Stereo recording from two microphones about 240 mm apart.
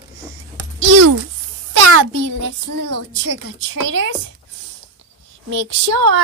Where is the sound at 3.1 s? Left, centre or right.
Right.